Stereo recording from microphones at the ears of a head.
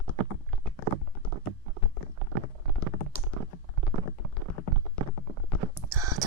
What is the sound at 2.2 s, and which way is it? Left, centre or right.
Stomach rumble, right.